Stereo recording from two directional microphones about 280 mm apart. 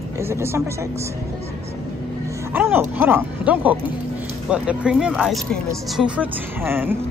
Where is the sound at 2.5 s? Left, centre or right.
Centre.